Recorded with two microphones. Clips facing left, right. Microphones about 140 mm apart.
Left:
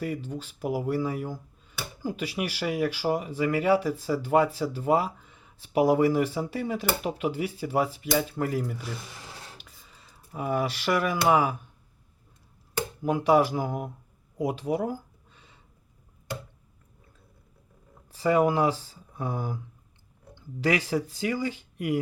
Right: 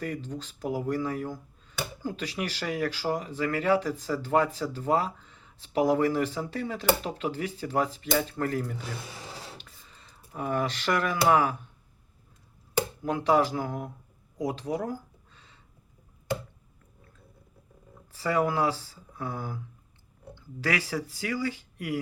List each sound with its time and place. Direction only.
0.0 s speech: 10° left (ahead or behind)
13.0 s speech: 10° left (ahead or behind)
14.3 s a sound: 10° left (ahead or behind)
18.1 s speech: 15° left (ahead or behind)